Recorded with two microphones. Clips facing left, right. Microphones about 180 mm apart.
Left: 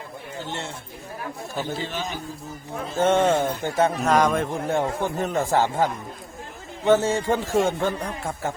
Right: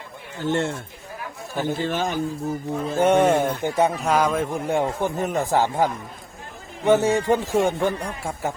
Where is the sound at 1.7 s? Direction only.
50° right (ahead or behind).